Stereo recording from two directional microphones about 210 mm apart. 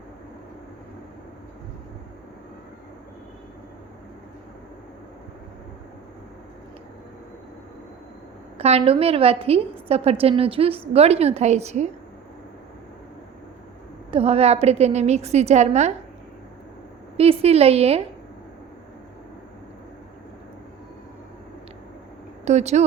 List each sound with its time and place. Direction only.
8.5 s a woman's voice: 30° right (ahead or behind)
14.1 s a woman's voice: 30° right (ahead or behind)
17.2 s a woman's voice: 30° right (ahead or behind)
22.4 s a woman's voice: 30° right (ahead or behind)